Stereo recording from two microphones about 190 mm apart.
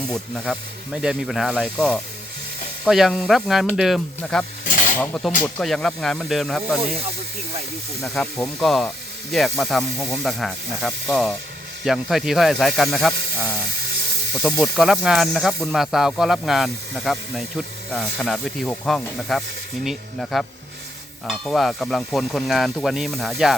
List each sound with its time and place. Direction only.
0.1 s speech: 5° left (ahead or behind)
4.6 s a sound: 45° left (ahead or behind)
4.9 s speech: 5° left (ahead or behind)
8.0 s speech: centre (ahead or behind)
14.6 s speech: centre (ahead or behind)